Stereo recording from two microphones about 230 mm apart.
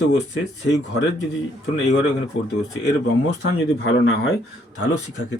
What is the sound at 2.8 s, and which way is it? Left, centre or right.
Speech, left.